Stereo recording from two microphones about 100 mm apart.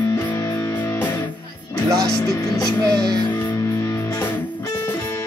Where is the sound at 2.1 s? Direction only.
40° left (ahead or behind).